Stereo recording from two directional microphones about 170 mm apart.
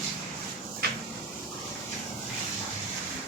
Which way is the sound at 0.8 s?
70° right (ahead or behind).